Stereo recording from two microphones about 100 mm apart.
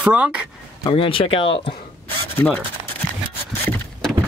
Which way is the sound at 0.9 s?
60° left (ahead or behind).